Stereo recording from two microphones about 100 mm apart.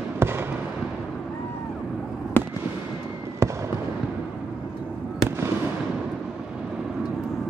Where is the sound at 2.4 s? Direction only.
20° left (ahead or behind).